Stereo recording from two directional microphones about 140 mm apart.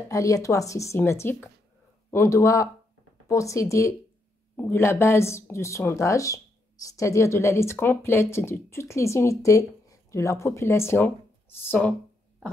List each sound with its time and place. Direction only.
0.1 s speech: 25° left (ahead or behind)